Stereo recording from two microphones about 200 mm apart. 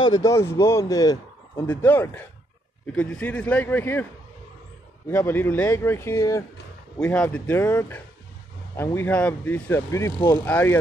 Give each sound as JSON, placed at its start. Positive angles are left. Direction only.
{"t": 0.0, "sound": "speech", "side_deg": 20}
{"t": 5.1, "sound": "speech", "side_deg": 10}